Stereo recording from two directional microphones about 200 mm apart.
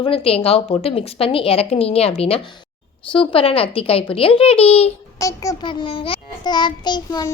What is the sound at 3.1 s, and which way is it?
A woman's voice, 25° left (ahead or behind).